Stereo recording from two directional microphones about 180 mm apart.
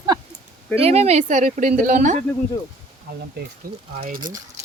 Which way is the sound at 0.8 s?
35° right (ahead or behind).